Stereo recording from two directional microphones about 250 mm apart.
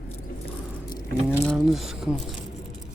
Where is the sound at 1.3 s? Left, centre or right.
Centre.